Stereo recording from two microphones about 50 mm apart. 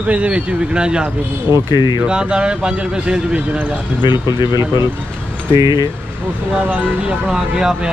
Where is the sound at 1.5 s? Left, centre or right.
Right.